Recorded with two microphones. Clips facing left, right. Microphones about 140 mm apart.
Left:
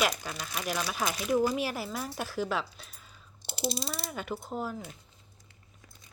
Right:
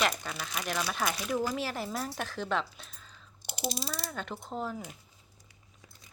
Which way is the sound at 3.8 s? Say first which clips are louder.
Left 2 dB; 10° left (ahead or behind).